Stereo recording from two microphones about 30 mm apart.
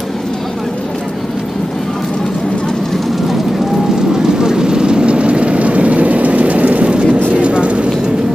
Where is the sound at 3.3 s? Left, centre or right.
Centre.